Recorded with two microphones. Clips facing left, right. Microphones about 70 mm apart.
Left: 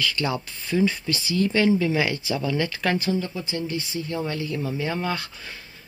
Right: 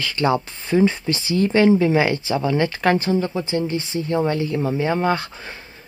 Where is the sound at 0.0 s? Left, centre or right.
Right.